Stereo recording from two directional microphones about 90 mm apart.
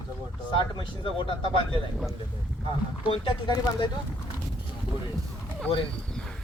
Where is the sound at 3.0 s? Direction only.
70° left (ahead or behind).